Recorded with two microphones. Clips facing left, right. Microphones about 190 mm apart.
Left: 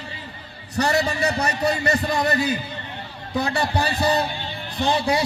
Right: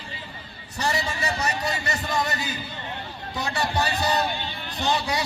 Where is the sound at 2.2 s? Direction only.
60° left (ahead or behind).